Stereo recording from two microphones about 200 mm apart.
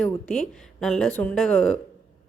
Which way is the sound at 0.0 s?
5° left (ahead or behind).